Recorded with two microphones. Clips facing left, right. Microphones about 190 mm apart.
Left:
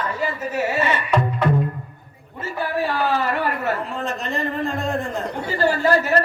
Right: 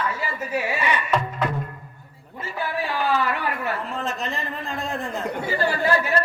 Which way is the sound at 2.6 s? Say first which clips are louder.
Left 3 dB; 45° left (ahead or behind).